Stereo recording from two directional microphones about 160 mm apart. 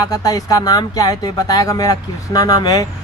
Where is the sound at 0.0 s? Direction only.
25° left (ahead or behind).